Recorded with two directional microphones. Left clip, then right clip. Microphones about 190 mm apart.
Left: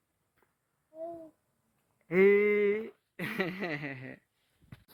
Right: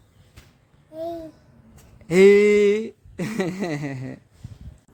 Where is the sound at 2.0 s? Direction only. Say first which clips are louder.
Right 10 dB; 25° right (ahead or behind).